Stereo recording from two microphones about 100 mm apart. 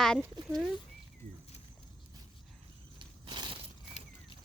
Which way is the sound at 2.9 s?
55° right (ahead or behind).